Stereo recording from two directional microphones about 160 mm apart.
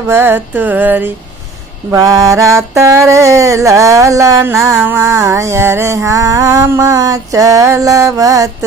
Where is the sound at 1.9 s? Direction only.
20° right (ahead or behind).